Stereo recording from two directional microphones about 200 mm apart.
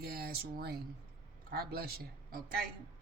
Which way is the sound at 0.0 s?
50° right (ahead or behind).